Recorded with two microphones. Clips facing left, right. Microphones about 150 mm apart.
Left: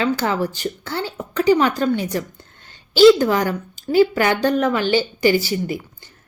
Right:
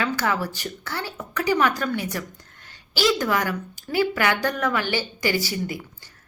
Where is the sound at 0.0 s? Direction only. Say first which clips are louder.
Left 5 dB; 25° left (ahead or behind).